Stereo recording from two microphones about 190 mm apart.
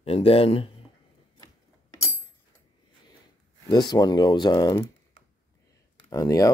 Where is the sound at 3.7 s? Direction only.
20° left (ahead or behind).